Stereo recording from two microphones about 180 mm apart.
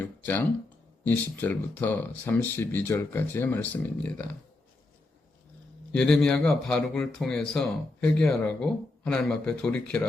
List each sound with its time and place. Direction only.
0.0 s a sound: 10° left (ahead or behind)
1.0 s speech: 10° left (ahead or behind)
5.9 s a man's voice: 5° left (ahead or behind)